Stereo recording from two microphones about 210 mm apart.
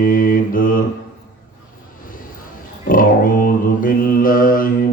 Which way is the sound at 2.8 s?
40° left (ahead or behind).